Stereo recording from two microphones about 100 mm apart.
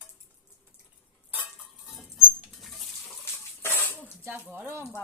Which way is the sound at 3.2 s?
20° left (ahead or behind).